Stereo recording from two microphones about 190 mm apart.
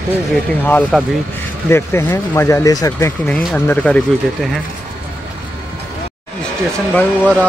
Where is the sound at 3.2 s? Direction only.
5° left (ahead or behind).